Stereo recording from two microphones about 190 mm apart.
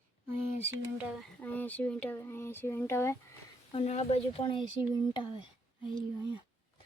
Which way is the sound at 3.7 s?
35° left (ahead or behind).